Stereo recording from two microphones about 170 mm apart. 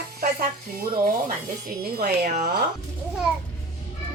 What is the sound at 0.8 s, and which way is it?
Stir, 55° right (ahead or behind).